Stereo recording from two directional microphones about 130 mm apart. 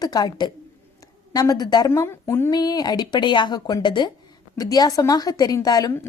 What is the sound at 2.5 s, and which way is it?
A woman's voice, 30° left (ahead or behind).